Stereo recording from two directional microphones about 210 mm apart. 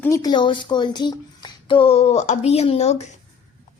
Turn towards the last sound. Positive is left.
turn(degrees=30)  # may be behind; listen again after turning